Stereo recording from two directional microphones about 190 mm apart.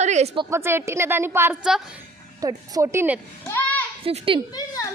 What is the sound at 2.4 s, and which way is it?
Speech, 20° right (ahead or behind).